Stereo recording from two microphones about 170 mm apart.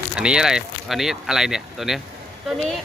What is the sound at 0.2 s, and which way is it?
Speech, 5° right (ahead or behind).